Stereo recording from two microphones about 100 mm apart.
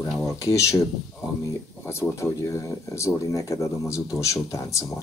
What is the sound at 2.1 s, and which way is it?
Speech, 30° left (ahead or behind).